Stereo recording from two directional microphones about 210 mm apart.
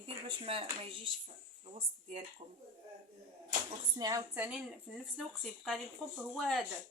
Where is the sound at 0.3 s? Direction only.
25° right (ahead or behind).